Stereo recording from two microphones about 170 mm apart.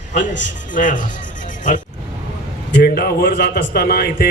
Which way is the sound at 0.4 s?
50° left (ahead or behind).